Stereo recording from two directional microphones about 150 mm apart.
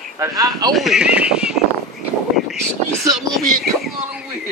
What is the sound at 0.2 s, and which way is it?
Speech, 20° right (ahead or behind).